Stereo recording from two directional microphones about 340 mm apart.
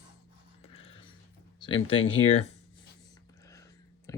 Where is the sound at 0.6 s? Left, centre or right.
Centre.